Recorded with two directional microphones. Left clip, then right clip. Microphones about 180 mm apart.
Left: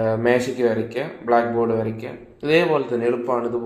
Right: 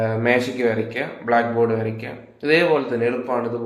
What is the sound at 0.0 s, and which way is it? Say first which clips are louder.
Speech: even; 35° left (ahead or behind).